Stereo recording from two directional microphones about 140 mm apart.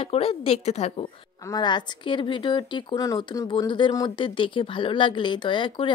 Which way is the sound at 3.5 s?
35° left (ahead or behind).